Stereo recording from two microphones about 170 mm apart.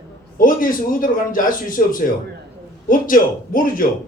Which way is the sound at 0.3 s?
55° left (ahead or behind).